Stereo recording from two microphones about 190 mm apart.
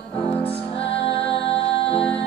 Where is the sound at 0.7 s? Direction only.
30° left (ahead or behind).